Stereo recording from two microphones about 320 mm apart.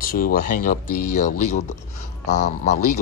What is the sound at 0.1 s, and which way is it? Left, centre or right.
Speech, left.